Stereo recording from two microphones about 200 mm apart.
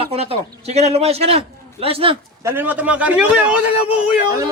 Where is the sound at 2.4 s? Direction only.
10° right (ahead or behind).